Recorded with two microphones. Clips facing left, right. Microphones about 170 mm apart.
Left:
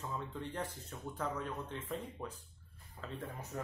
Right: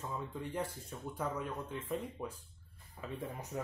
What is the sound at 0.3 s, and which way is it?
Speech, 10° right (ahead or behind).